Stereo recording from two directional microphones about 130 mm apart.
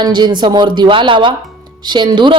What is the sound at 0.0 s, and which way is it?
A woman's voice, 35° right (ahead or behind).